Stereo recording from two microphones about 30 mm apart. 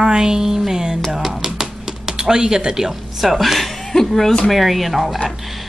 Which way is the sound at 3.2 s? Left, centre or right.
Centre.